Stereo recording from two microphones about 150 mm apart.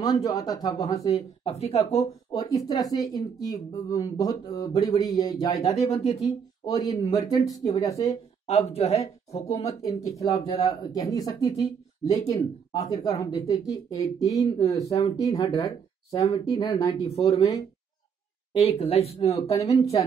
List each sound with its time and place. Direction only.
0.0 s speech: 25° left (ahead or behind)
1.4 s speech: 45° left (ahead or behind)
2.3 s speech: 25° left (ahead or behind)
5.8 s speech: 45° left (ahead or behind)
6.6 s speech: 25° left (ahead or behind)
8.0 s speech: 45° left (ahead or behind)
9.8 s speech: 20° left (ahead or behind)
18.6 s speech: 45° left (ahead or behind)
19.4 s speech: 25° left (ahead or behind)